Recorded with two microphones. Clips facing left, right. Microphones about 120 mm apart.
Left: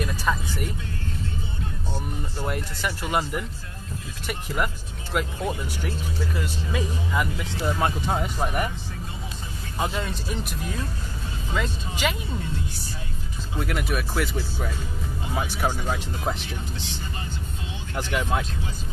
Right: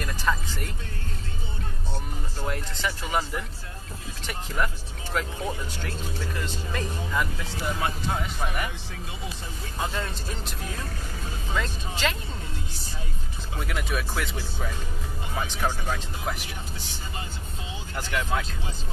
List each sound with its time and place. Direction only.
0.0 s speech: 10° left (ahead or behind)
2.3 s speech: 10° left (ahead or behind)
4.6 s speech: 10° left (ahead or behind)
7.8 s speech: 45° left (ahead or behind)
9.8 s speech: 10° left (ahead or behind)
11.5 s speech: 10° left (ahead or behind)
13.6 s speech: 5° left (ahead or behind)
17.9 s speech: 15° left (ahead or behind)